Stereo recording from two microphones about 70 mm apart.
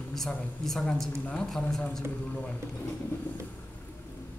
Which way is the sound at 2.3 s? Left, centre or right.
Centre.